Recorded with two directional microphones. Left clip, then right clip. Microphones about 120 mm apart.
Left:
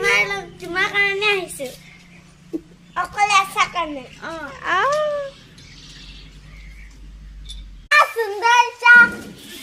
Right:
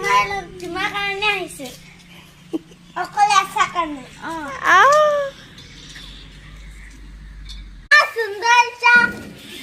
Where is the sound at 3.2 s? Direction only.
Centre (ahead or behind).